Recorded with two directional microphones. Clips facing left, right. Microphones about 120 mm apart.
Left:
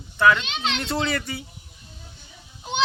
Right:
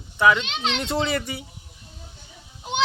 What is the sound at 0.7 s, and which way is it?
Speech, 20° right (ahead or behind).